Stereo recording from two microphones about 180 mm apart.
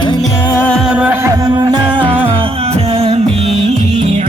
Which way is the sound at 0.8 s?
5° right (ahead or behind).